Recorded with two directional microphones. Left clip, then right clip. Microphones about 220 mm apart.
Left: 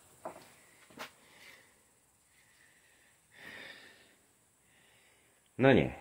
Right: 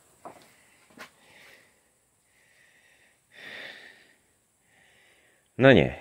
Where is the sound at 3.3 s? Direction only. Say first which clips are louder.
Right 7 dB; 45° right (ahead or behind).